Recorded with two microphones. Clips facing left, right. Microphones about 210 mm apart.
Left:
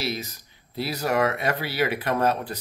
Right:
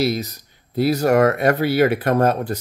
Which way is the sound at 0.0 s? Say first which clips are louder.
Right 9 dB; 45° right (ahead or behind).